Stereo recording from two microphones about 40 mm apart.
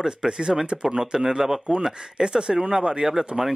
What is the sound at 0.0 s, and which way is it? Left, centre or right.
Speech, centre.